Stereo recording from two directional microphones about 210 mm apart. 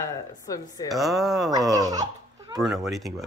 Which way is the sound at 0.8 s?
Centre (ahead or behind).